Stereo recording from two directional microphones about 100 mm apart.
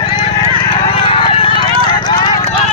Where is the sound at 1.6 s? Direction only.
50° left (ahead or behind).